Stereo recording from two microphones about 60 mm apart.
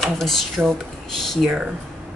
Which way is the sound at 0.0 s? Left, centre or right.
Centre.